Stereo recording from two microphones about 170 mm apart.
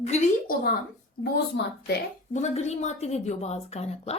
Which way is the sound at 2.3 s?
40° left (ahead or behind).